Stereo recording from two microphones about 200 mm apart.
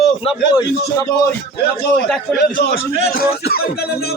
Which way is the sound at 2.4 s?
50° left (ahead or behind).